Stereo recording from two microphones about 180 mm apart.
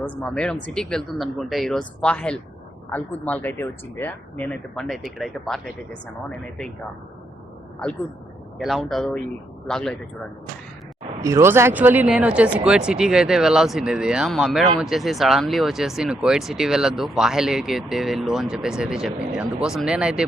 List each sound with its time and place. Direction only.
0.0 s speech: 5° left (ahead or behind)
8.5 s speech: centre (ahead or behind)
11.2 s speech: 15° right (ahead or behind)